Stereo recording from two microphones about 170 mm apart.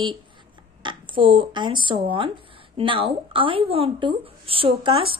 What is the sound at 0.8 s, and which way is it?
Speech, 30° right (ahead or behind).